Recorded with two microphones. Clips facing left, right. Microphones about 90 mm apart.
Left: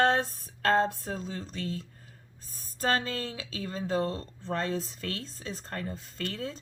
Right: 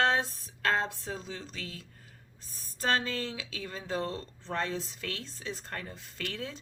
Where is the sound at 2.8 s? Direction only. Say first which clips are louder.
Left 1 dB; 35° left (ahead or behind).